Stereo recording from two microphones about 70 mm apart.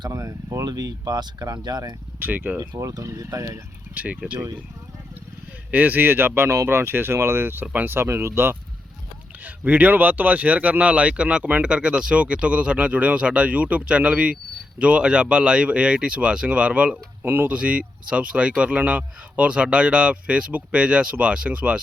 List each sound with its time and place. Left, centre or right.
0.0 s a sound: right
0.6 s speech: right
2.1 s speech: right
2.6 s speech: right
3.9 s speech: centre
5.7 s speech: right
9.4 s speech: right
17.6 s speech: centre